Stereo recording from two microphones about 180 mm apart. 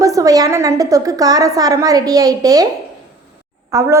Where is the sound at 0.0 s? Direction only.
20° right (ahead or behind).